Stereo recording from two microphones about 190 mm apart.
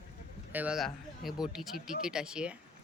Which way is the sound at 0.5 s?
5° right (ahead or behind).